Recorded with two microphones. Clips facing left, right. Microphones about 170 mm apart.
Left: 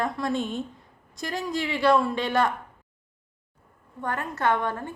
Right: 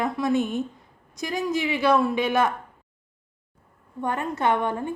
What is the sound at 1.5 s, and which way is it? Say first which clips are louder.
Speech: right 3 dB; 20° right (ahead or behind).